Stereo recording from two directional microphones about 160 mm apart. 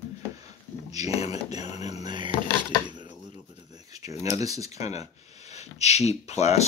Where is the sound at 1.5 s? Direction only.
45° left (ahead or behind).